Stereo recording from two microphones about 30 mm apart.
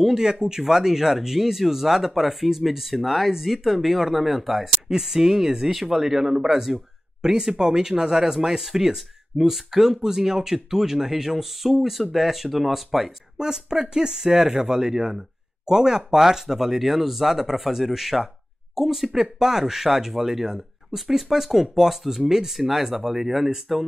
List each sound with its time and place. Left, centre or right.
0.1 s speech: right; by 4.6 s centre
4.8 s speech: centre
13.4 s speech: right
22.2 s speech: centre